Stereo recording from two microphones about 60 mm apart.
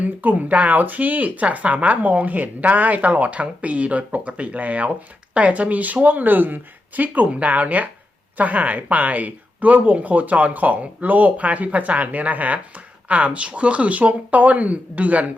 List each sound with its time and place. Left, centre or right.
0.0 s speech: right